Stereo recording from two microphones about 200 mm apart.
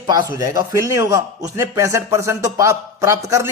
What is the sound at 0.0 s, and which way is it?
A man's voice, 20° right (ahead or behind).